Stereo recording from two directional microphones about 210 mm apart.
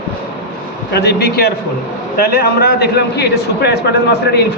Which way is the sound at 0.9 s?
50° left (ahead or behind).